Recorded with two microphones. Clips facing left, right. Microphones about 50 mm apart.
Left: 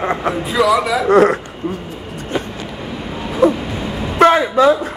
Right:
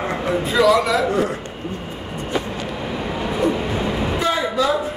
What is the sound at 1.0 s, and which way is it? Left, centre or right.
Speech, left.